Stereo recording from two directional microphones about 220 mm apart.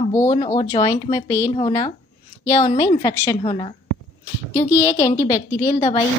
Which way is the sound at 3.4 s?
25° left (ahead or behind).